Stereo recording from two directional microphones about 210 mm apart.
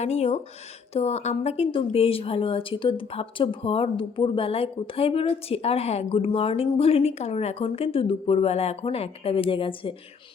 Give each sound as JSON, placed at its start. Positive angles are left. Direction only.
{"t": 0.0, "sound": "a woman's voice", "side_deg": 30}